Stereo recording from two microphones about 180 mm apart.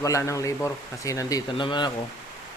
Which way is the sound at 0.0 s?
15° left (ahead or behind).